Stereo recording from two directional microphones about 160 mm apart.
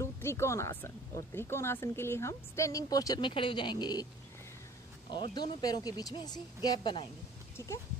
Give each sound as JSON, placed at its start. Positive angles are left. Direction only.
{"t": 0.0, "sound": "speech", "side_deg": 15}
{"t": 5.1, "sound": "speech", "side_deg": 30}
{"t": 7.5, "sound": "speech", "side_deg": 20}